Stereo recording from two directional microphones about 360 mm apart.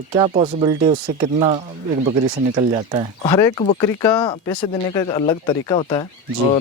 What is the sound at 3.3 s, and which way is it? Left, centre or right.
Speech, centre.